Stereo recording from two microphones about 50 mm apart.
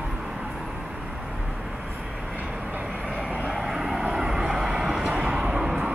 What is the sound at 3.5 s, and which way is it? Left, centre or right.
Vehicle, centre.